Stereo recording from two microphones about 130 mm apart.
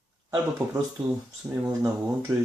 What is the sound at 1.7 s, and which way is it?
Speech, 25° right (ahead or behind).